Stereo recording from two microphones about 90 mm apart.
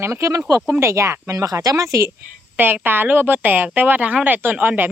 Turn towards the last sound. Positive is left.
turn(degrees=-20)  # may be behind; listen again after turning